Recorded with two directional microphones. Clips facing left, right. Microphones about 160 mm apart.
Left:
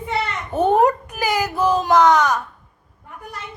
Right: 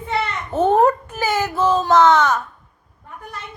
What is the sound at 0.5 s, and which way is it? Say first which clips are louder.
Speech: right 1 dB; 15° left (ahead or behind).